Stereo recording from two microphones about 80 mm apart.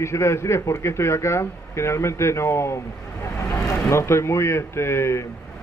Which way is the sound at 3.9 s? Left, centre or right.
Left.